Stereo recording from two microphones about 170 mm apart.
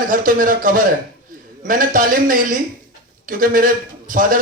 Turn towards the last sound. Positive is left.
turn(degrees=-55)  # may be behind; listen again after turning